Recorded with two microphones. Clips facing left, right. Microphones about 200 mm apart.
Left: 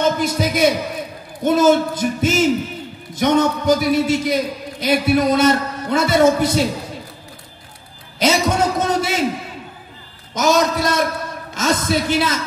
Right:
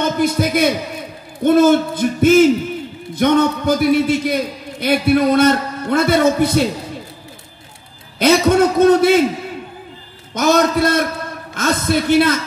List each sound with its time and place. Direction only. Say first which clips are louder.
0.2 s a man's voice: right 2 dB; 55° right (ahead or behind)
8.2 s a man's voice: right 5 dB; 60° right (ahead or behind)
10.3 s a man's voice: right 2 dB; 60° right (ahead or behind)